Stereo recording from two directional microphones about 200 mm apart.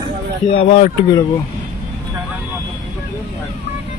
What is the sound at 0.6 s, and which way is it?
Speech, 30° left (ahead or behind).